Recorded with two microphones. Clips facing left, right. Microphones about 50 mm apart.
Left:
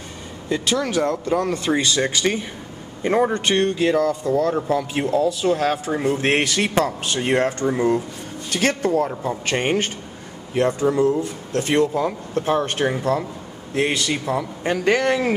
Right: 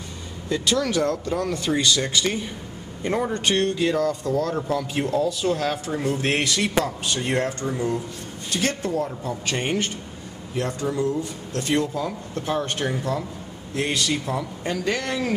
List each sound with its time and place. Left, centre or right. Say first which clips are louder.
0.5 s speech: left 1 dB; centre
5.9 s speech: left 4 dB; left
9.1 s speech: left 4 dB; left
14.6 s speech: left 9 dB; left